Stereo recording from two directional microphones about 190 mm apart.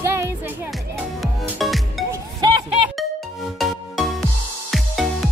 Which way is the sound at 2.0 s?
20° right (ahead or behind).